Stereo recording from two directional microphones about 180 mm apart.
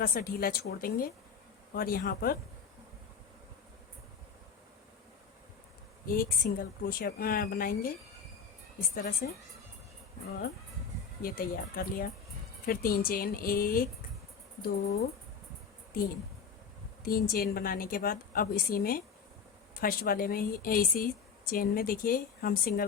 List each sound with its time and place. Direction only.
0.0 s a woman's voice: 55° left (ahead or behind)
6.1 s speech: 50° left (ahead or behind)
9.0 s speech: 50° left (ahead or behind)
11.2 s a woman's voice: 55° left (ahead or behind)
17.0 s speech: 55° left (ahead or behind)